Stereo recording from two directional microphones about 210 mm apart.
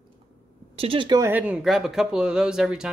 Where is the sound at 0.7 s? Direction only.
25° right (ahead or behind).